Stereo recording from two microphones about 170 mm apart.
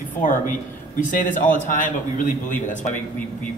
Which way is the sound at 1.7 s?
50° left (ahead or behind).